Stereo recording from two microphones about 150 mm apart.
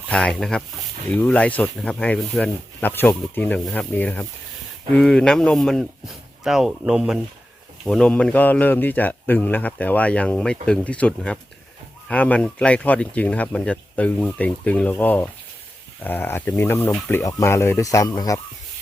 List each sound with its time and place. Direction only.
0.1 s speech: 5° left (ahead or behind); by 18.3 s 25° left (ahead or behind)